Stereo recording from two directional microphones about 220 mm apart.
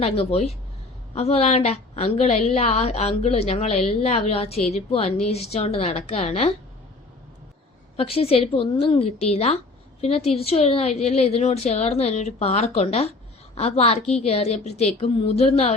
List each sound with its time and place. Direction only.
0.0 s a woman's voice: 25° left (ahead or behind)
7.9 s a woman's voice: 25° left (ahead or behind)